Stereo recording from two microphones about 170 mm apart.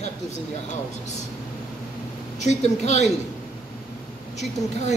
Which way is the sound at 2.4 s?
40° left (ahead or behind).